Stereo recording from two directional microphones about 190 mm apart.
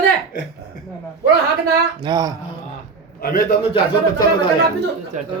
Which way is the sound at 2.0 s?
20° right (ahead or behind).